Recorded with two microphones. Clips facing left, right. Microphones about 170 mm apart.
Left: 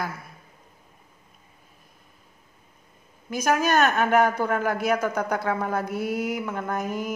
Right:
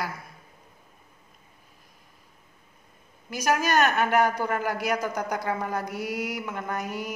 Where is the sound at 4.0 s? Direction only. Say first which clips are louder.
Left 2 dB; 50° left (ahead or behind).